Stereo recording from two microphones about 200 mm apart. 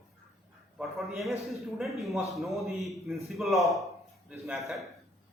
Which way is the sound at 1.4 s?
Centre (ahead or behind).